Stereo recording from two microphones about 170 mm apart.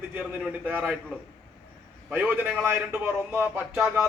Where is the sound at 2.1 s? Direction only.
10° right (ahead or behind).